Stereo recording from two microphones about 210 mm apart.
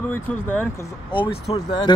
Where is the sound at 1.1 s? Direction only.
25° left (ahead or behind).